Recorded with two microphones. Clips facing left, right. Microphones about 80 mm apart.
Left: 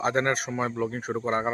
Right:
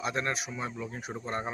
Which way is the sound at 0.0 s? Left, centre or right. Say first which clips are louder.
Left 7 dB; left.